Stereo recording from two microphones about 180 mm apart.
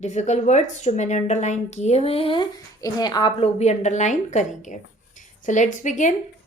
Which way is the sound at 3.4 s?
40° left (ahead or behind).